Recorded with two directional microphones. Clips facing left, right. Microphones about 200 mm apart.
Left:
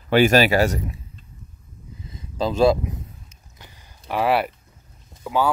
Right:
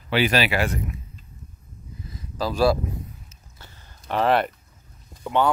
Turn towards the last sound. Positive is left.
turn(degrees=5)  # may be behind; listen again after turning